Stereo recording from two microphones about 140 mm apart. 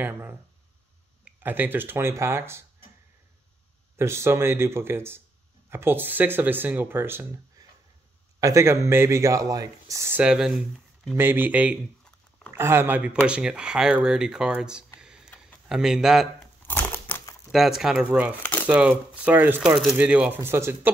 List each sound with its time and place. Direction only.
0.0 s speech: 15° right (ahead or behind)
3.9 s speech: 20° right (ahead or behind)
10.2 s speech: 5° right (ahead or behind)
15.0 s a sound: 5° right (ahead or behind)
15.2 s a sound: 10° left (ahead or behind)
15.7 s speech: 5° right (ahead or behind)
16.6 s typewriter: 15° left (ahead or behind)
17.5 s speech: centre (ahead or behind)
18.4 s crumpling: 10° left (ahead or behind)
18.7 s speech: 10° right (ahead or behind)